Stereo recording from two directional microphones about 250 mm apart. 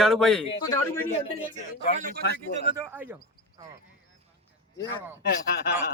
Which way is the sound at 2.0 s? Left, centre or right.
Right.